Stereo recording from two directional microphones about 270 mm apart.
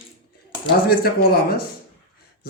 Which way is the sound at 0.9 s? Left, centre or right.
Left.